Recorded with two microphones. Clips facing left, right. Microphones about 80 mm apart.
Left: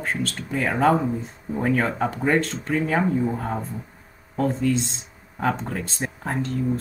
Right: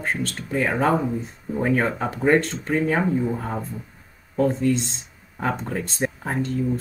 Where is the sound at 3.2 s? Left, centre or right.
Centre.